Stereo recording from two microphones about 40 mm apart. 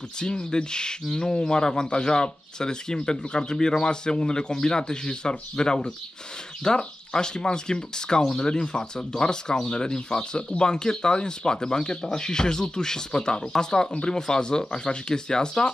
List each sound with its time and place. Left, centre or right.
0.2 s speech: centre